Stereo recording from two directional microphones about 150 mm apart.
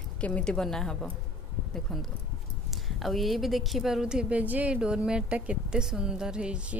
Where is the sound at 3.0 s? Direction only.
Centre (ahead or behind).